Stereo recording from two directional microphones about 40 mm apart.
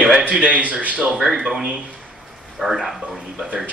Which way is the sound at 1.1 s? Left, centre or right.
Centre.